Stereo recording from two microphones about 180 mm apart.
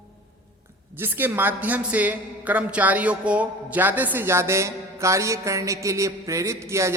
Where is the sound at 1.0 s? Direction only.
10° right (ahead or behind).